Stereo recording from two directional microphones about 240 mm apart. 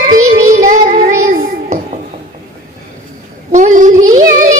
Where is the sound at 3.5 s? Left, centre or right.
Right.